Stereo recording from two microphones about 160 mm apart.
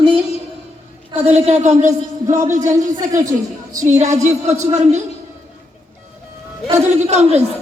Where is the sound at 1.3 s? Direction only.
45° right (ahead or behind).